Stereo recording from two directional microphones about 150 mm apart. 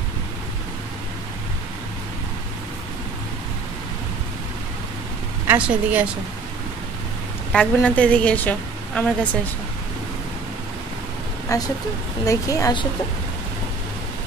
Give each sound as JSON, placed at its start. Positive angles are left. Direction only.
{"t": 5.5, "sound": "a woman's voice", "side_deg": -10}
{"t": 7.5, "sound": "a woman's voice", "side_deg": 10}
{"t": 11.4, "sound": "a woman's voice", "side_deg": 25}